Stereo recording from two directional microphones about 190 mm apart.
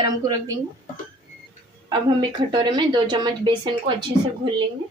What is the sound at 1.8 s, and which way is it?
A woman's voice, 25° right (ahead or behind).